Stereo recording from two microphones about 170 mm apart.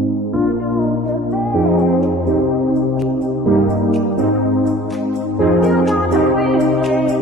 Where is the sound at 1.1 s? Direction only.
Centre (ahead or behind).